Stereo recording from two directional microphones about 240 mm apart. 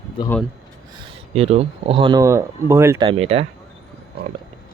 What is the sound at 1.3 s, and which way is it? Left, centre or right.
Speech, right.